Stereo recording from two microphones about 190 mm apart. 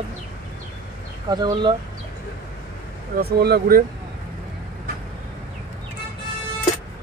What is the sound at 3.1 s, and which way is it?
Speech, 55° right (ahead or behind).